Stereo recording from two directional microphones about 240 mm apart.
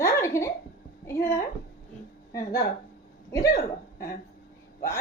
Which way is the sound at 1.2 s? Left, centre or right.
Left.